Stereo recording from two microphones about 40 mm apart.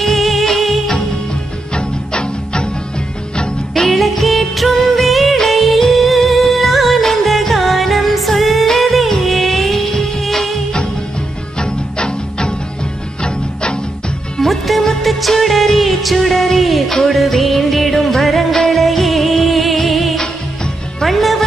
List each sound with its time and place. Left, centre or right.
0.0 s music: centre
1.8 s music: left
3.9 s music: centre
11.6 s music: left
14.4 s music: centre